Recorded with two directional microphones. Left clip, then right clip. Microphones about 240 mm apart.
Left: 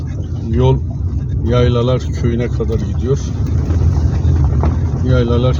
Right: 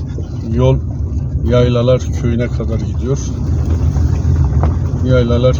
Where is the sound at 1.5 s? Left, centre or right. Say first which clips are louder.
Right 3 dB; centre.